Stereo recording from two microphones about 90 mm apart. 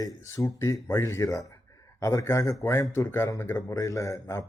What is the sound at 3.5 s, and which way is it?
Speech, 40° left (ahead or behind).